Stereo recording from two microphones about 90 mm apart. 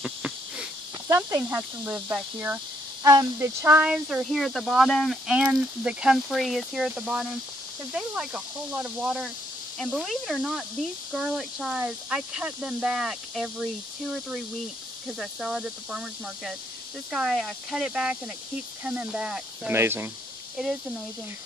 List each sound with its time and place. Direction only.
0.0 s a sound: 10° right (ahead or behind)
1.1 s speech: 30° right (ahead or behind)
3.8 s speech: 10° right (ahead or behind)
5.3 s speech: 15° right (ahead or behind)
7.1 s speech: 15° right (ahead or behind)
15.0 s speech: 10° right (ahead or behind)
17.1 s speech: centre (ahead or behind)
18.9 s speech: 15° right (ahead or behind)
19.7 s speech: 25° right (ahead or behind)